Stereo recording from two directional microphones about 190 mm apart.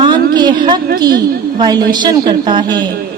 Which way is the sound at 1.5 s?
20° right (ahead or behind).